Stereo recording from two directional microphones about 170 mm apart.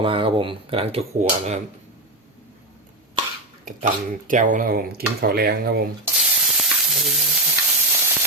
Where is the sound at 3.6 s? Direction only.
50° right (ahead or behind); by 5.7 s 65° right (ahead or behind).